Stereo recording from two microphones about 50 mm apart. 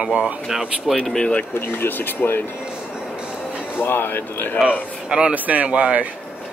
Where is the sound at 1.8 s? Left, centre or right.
Left.